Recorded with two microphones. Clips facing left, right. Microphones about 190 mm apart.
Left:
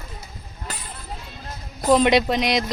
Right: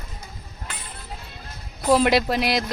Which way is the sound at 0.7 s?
40° left (ahead or behind).